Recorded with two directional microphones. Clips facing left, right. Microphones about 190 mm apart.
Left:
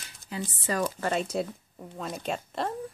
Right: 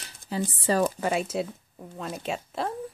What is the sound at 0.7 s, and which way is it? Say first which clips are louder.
Speech: right 5 dB; 30° right (ahead or behind).